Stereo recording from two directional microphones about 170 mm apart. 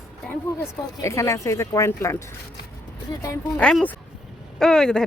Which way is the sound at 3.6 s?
5° left (ahead or behind).